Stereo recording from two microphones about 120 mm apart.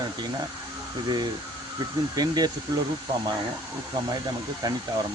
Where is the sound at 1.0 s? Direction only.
35° right (ahead or behind).